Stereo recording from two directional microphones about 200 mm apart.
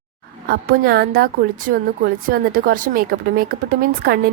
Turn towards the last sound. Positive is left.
turn(degrees=-45)  # may be behind; listen again after turning